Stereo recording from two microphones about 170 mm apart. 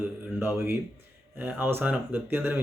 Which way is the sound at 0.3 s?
15° right (ahead or behind).